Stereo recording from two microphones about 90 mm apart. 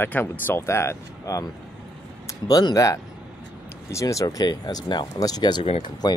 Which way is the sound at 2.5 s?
45° left (ahead or behind).